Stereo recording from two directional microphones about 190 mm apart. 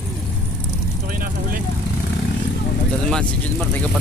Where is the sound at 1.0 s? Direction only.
50° right (ahead or behind).